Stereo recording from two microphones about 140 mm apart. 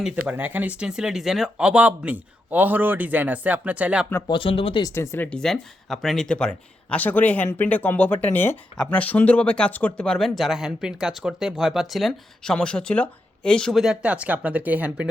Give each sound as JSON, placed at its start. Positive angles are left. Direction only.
{"t": 0.3, "sound": "speech", "side_deg": -15}
{"t": 4.3, "sound": "speech", "side_deg": 40}
{"t": 4.8, "sound": "speech", "side_deg": 20}